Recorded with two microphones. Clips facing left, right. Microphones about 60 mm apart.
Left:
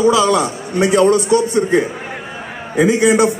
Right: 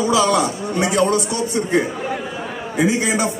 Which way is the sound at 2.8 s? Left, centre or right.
Left.